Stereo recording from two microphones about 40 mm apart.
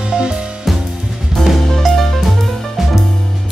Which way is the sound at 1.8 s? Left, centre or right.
Centre.